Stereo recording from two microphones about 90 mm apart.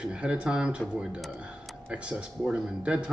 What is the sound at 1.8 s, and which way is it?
Speech, 15° right (ahead or behind).